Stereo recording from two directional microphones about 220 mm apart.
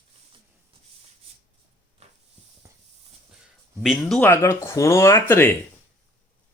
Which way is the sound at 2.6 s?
15° right (ahead or behind).